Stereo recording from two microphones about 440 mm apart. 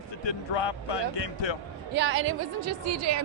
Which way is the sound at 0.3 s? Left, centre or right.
Left.